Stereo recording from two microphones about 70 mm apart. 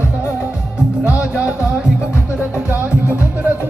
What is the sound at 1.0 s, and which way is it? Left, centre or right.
Music, centre.